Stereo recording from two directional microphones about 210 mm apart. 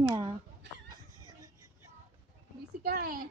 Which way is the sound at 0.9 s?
20° right (ahead or behind).